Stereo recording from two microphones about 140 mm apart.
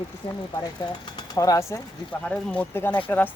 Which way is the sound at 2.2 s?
10° left (ahead or behind).